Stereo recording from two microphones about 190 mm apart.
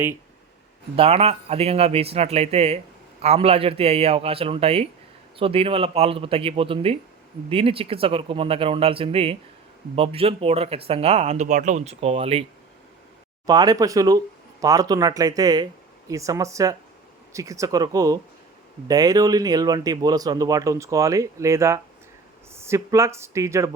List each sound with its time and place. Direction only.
0.9 s speech: 30° right (ahead or behind)
13.5 s speech: 20° right (ahead or behind)